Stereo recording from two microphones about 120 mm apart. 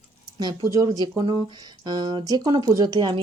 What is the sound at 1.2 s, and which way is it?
Speech, 40° right (ahead or behind).